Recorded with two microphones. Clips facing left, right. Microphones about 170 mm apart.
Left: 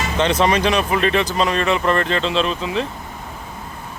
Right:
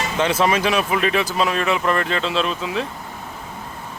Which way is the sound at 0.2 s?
5° right (ahead or behind).